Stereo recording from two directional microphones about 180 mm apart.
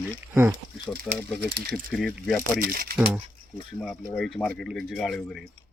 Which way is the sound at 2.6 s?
55° right (ahead or behind).